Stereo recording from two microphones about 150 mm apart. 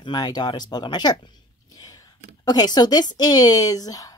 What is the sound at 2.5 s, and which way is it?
Speech, 25° left (ahead or behind).